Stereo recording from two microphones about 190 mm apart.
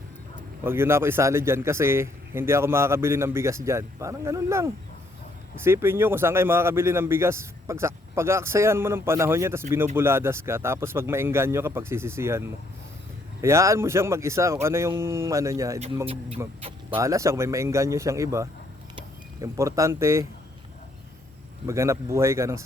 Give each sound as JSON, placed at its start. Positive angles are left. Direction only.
{"t": 0.6, "sound": "a man's voice", "side_deg": -10}
{"t": 21.7, "sound": "a man's voice", "side_deg": -15}